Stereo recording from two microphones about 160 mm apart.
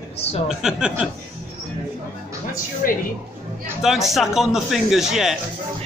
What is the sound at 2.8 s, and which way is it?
Speech, 60° left (ahead or behind).